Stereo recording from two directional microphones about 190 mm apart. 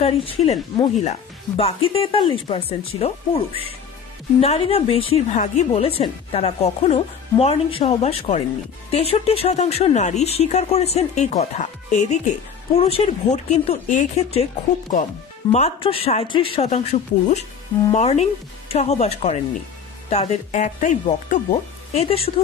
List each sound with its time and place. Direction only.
0.0 s a woman's voice: 30° left (ahead or behind)